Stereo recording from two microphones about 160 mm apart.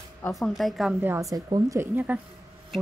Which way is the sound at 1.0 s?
15° right (ahead or behind).